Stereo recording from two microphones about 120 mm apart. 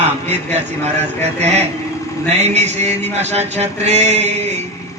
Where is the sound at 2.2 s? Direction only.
65° right (ahead or behind).